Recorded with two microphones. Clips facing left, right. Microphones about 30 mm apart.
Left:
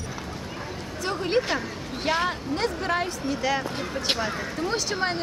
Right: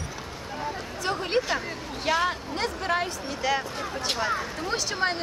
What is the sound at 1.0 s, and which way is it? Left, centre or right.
Speech, centre.